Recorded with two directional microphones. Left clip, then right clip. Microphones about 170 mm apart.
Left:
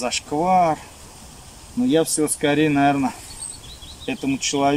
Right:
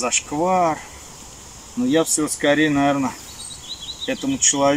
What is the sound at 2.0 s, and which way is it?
Speech, 25° left (ahead or behind).